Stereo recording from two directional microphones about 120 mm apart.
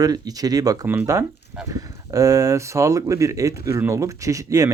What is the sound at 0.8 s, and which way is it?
Speech, 15° right (ahead or behind).